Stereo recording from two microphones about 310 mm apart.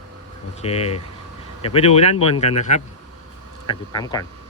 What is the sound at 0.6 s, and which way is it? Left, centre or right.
Speech, centre.